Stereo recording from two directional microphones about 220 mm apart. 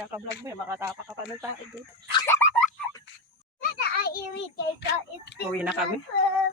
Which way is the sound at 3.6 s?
45° left (ahead or behind).